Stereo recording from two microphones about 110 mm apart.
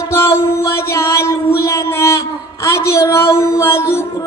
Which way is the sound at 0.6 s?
25° left (ahead or behind).